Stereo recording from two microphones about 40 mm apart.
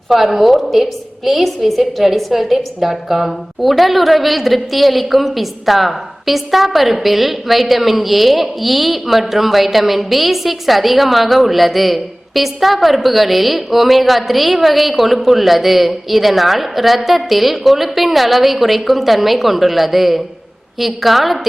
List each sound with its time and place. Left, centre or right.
0.1 s a woman's voice: centre